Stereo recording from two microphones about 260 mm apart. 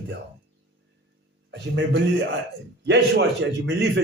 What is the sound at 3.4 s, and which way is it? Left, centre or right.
Speech, right.